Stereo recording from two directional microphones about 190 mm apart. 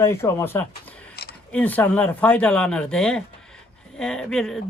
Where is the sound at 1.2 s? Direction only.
55° left (ahead or behind).